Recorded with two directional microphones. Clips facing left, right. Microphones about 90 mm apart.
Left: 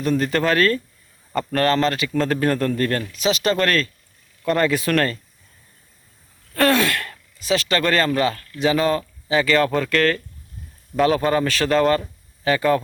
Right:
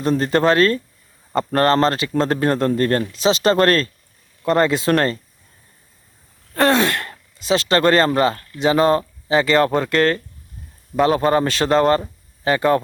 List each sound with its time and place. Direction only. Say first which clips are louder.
0.0 s a man's voice: right 3 dB; 30° right (ahead or behind)
6.5 s a man's voice: right 2 dB; 25° right (ahead or behind)